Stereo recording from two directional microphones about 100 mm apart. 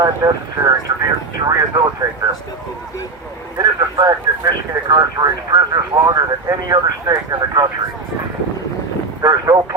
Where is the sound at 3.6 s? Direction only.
45° right (ahead or behind).